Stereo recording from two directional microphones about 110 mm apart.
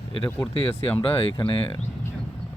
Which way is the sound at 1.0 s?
55° left (ahead or behind).